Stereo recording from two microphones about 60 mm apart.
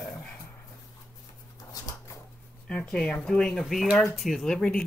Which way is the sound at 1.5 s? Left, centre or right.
Left.